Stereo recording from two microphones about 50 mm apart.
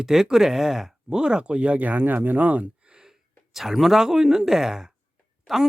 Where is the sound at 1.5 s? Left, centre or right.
Right.